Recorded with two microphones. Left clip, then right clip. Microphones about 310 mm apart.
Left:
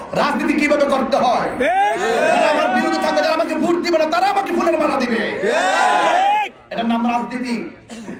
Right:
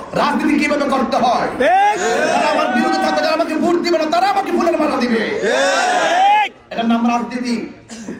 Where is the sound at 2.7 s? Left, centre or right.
Right.